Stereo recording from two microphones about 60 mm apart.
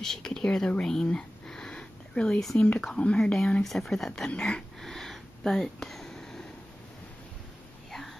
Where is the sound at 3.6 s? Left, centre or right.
Centre.